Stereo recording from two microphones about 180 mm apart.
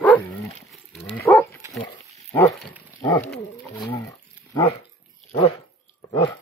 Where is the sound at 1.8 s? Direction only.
25° left (ahead or behind).